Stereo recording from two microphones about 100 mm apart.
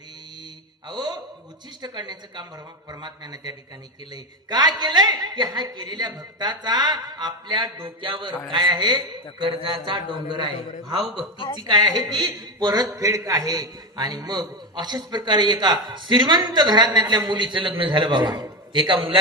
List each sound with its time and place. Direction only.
0.9 s a sound: 45° right (ahead or behind)
1.8 s a man's voice: 45° right (ahead or behind)
9.4 s a man's voice: 60° right (ahead or behind)
11.3 s a woman's voice: 55° left (ahead or behind)
11.7 s a man's voice: 45° right (ahead or behind)